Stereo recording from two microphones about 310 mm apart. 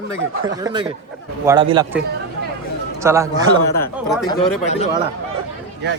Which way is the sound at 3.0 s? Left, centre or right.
Centre.